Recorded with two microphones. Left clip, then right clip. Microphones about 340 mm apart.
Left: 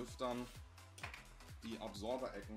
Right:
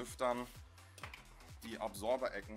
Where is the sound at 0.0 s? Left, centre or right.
Right.